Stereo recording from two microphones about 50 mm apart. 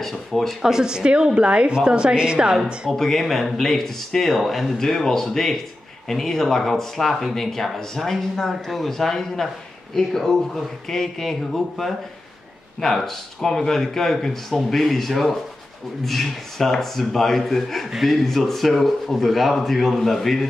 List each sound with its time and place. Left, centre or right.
0.0 s speech: centre
0.6 s a woman's voice: centre
2.9 s speech: centre
4.7 s speech: centre